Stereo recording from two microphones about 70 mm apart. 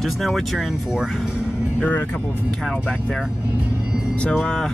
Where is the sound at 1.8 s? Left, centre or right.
Left.